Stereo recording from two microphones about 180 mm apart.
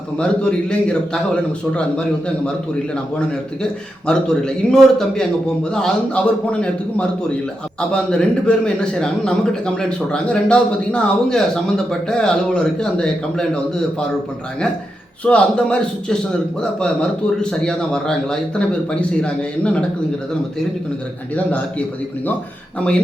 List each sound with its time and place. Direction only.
0.2 s a man's voice: 5° left (ahead or behind)
15.2 s a man's voice: 5° left (ahead or behind)
21.3 s a man's voice: 5° left (ahead or behind)